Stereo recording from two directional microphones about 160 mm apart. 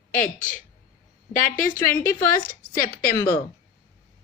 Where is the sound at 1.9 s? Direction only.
15° left (ahead or behind).